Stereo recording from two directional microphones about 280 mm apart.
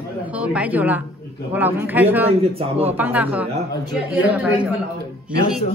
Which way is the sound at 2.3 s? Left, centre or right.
Right.